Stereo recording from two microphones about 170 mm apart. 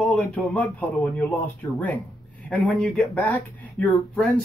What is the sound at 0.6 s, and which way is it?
Speech, 10° left (ahead or behind).